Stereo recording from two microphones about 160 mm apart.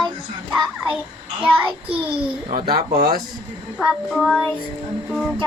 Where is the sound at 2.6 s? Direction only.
75° right (ahead or behind).